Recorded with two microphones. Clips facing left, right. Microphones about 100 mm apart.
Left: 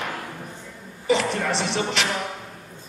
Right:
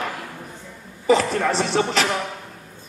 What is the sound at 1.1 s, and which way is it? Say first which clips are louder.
A man's voice: right 4 dB; 40° right (ahead or behind).